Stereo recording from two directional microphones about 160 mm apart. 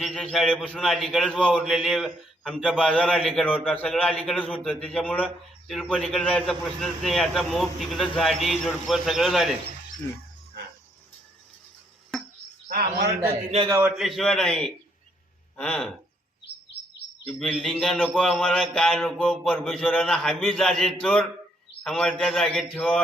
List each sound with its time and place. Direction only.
0.2 s a man's voice: 5° left (ahead or behind)
13.7 s a man's voice: 15° right (ahead or behind)
13.9 s a man's voice: centre (ahead or behind)
17.2 s a man's voice: 5° left (ahead or behind)